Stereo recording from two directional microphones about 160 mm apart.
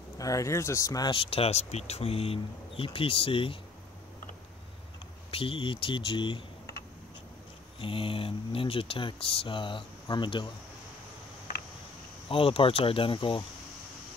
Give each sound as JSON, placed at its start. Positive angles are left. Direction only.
{"t": 0.2, "sound": "speech", "side_deg": 20}
{"t": 5.3, "sound": "speech", "side_deg": 35}
{"t": 7.8, "sound": "speech", "side_deg": 35}
{"t": 12.3, "sound": "speech", "side_deg": 35}